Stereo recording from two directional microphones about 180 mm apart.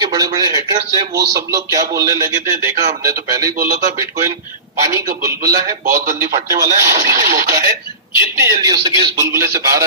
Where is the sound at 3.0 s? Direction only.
20° right (ahead or behind).